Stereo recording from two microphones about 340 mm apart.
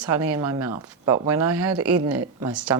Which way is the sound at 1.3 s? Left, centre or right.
Right.